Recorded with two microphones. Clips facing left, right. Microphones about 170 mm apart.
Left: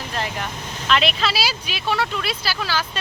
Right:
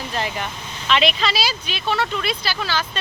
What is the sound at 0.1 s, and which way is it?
Vehicle, centre (ahead or behind).